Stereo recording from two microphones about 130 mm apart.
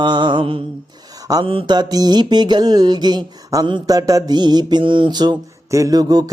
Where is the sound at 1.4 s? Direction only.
40° right (ahead or behind).